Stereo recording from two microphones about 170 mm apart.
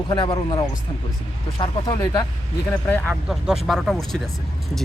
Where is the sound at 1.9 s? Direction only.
20° left (ahead or behind).